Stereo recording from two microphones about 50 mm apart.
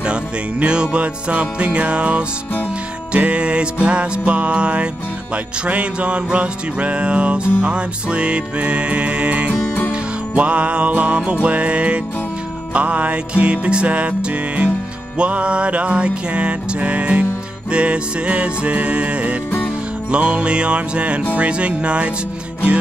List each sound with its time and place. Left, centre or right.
0.0 s music: right
9.5 s music: left
10.3 s music: right
15.1 s music: right